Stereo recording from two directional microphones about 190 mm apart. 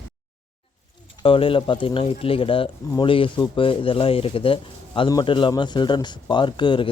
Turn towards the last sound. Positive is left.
turn(degrees=25)  # may be behind; listen again after turning